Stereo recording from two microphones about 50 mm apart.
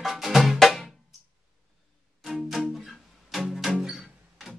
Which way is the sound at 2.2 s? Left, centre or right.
Centre.